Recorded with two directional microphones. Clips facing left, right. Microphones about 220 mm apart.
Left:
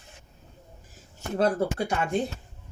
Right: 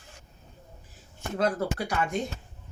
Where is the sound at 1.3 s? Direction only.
30° left (ahead or behind).